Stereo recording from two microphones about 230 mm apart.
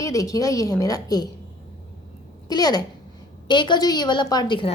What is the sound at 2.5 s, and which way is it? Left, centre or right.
A woman's voice, centre.